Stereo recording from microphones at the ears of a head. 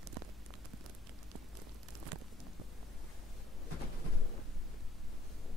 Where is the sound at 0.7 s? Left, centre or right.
Right.